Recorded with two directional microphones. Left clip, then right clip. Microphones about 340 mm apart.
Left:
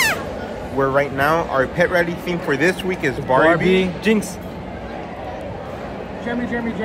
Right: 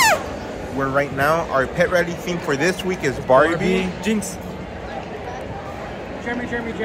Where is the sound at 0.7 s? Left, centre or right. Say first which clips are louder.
Left 3 dB; centre.